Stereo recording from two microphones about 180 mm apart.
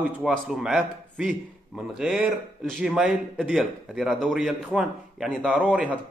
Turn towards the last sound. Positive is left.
turn(degrees=-5)  # may be behind; listen again after turning